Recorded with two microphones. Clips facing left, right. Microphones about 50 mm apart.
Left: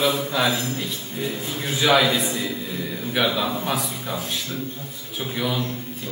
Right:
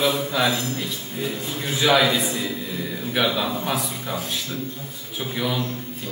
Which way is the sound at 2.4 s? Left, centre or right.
Centre.